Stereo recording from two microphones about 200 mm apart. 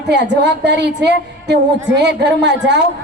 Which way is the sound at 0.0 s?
60° right (ahead or behind).